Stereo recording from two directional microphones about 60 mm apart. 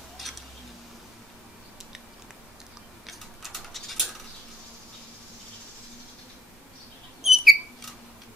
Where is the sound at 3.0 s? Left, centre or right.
Centre.